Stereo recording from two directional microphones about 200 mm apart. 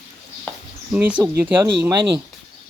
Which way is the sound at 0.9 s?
5° right (ahead or behind).